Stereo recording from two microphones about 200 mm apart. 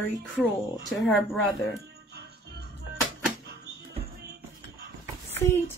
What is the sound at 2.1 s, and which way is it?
Music, 55° right (ahead or behind).